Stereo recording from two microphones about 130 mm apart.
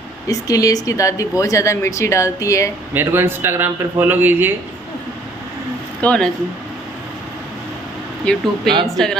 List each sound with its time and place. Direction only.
0.3 s speech: 25° left (ahead or behind)
2.9 s speech: 15° right (ahead or behind)
5.9 s speech: 10° left (ahead or behind)
8.3 s speech: 10° left (ahead or behind)